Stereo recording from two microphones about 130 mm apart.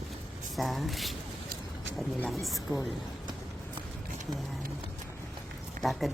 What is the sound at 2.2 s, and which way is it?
Speech, centre (ahead or behind).